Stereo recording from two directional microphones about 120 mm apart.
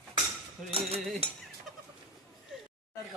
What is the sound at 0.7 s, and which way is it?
Cutlery, 55° right (ahead or behind).